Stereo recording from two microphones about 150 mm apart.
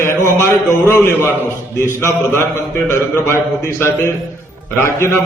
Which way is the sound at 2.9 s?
15° left (ahead or behind).